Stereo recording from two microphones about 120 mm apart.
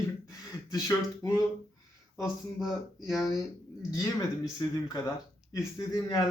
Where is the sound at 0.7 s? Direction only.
25° left (ahead or behind).